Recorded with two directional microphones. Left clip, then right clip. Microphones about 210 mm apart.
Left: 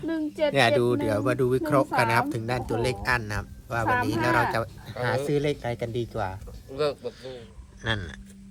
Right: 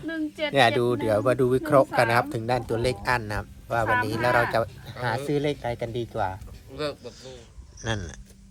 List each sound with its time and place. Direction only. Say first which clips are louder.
0.1 s speech: left 3 dB; 55° left (ahead or behind)
0.5 s speech: right 2 dB; 10° left (ahead or behind)
6.7 s speech: left 4 dB; 45° left (ahead or behind)
7.8 s speech: left 2 dB; 20° right (ahead or behind)